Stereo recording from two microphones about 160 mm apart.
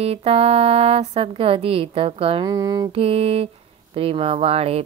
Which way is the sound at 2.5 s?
25° right (ahead or behind).